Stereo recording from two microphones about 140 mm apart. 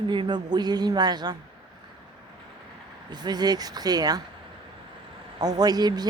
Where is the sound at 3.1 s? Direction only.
30° right (ahead or behind).